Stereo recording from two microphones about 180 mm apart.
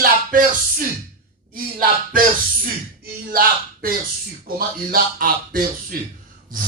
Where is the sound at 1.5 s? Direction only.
50° right (ahead or behind).